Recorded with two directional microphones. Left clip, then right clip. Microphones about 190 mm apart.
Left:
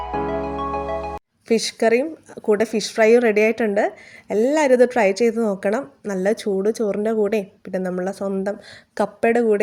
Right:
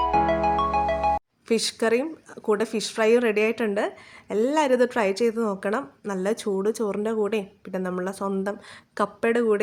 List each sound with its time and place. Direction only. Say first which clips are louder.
0.4 s speech: right 3 dB; centre (ahead or behind)